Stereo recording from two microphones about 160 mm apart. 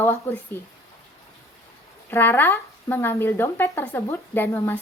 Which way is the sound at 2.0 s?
10° left (ahead or behind).